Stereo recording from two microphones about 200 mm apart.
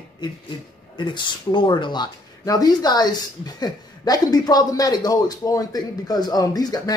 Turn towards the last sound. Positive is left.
turn(degrees=20)  # may be behind; listen again after turning